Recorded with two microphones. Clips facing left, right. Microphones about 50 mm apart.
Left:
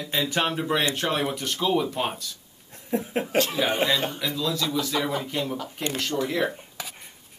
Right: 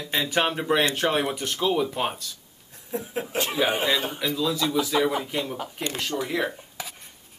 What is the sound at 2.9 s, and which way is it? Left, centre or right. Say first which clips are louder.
Speech: left 4 dB; left.